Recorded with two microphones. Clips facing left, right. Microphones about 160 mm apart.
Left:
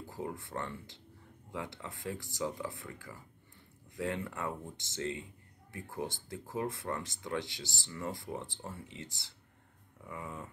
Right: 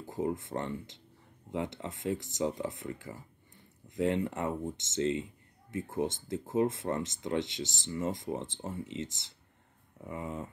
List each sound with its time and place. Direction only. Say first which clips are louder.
0.0 s speech: right 7 dB; 20° right (ahead or behind)